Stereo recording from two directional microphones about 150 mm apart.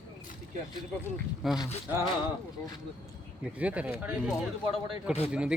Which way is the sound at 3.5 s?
10° right (ahead or behind).